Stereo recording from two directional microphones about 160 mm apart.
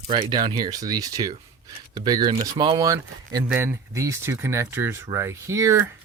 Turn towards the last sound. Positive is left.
turn(degrees=-15)  # may be behind; listen again after turning